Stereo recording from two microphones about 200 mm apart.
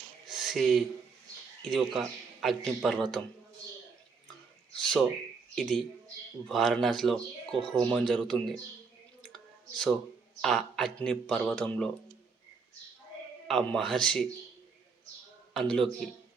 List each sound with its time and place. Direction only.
0.3 s a sound: centre (ahead or behind)
1.7 s a man's voice: centre (ahead or behind)
4.8 s a man's voice: centre (ahead or behind)
9.2 s a sound: 5° left (ahead or behind)
10.4 s a man's voice: centre (ahead or behind)
13.5 s a man's voice: centre (ahead or behind)
15.5 s a man's voice: 5° left (ahead or behind)